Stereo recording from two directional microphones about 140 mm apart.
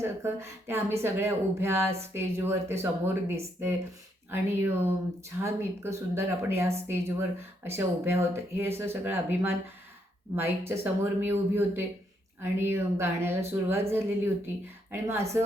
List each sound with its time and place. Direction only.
0.0 s speech: 20° right (ahead or behind)